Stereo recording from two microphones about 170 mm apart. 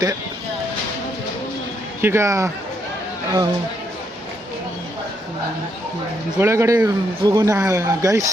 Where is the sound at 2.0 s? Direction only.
15° right (ahead or behind).